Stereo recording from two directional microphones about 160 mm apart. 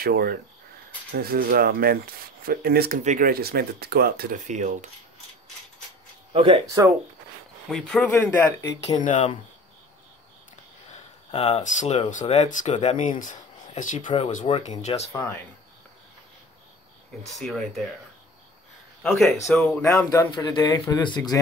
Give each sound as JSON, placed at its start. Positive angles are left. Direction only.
{"t": 0.0, "sound": "speech", "side_deg": -75}
{"t": 3.0, "sound": "speech", "side_deg": -55}
{"t": 4.5, "sound": "coin", "side_deg": -50}
{"t": 6.3, "sound": "speech", "side_deg": -35}
{"t": 6.6, "sound": "speech", "side_deg": -20}
{"t": 7.7, "sound": "speech", "side_deg": 5}
{"t": 9.0, "sound": "speech", "side_deg": 50}
{"t": 11.3, "sound": "speech", "side_deg": 40}
{"t": 17.2, "sound": "speech", "side_deg": 0}
{"t": 19.0, "sound": "speech", "side_deg": 0}
{"t": 20.1, "sound": "a man's voice", "side_deg": 20}